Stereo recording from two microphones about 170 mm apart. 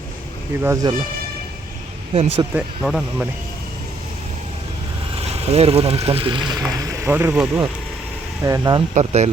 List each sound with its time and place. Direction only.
0.6 s speech: 20° right (ahead or behind)
2.1 s speech: 35° right (ahead or behind)
2.6 s speech: 5° right (ahead or behind)
5.5 s speech: 35° right (ahead or behind)
7.0 s speech: 10° right (ahead or behind)
8.4 s speech: 20° right (ahead or behind)
9.0 s speech: 40° right (ahead or behind)